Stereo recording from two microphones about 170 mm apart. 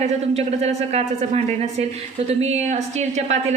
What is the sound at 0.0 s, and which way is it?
A woman's voice, 40° right (ahead or behind).